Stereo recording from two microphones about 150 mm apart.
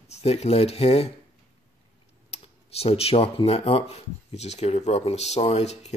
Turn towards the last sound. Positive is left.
turn(degrees=45)  # may be behind; listen again after turning